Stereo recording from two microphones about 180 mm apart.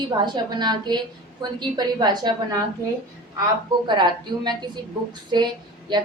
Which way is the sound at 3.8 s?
25° right (ahead or behind).